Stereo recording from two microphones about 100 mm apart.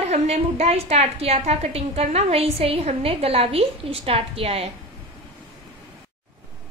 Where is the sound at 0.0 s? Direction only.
90° right.